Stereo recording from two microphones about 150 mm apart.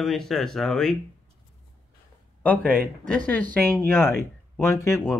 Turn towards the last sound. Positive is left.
turn(degrees=20)  # may be behind; listen again after turning